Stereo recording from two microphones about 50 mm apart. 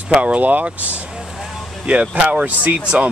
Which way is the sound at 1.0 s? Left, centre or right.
Centre.